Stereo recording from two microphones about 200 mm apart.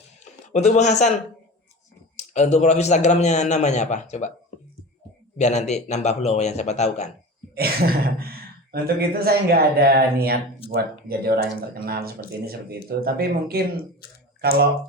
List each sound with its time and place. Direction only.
0.4 s a man's voice: 35° left (ahead or behind)
2.1 s a man's voice: 35° left (ahead or behind)
5.4 s a man's voice: 35° left (ahead or behind)
7.5 s a sound: 50° right (ahead or behind)
8.7 s speech: 50° right (ahead or behind)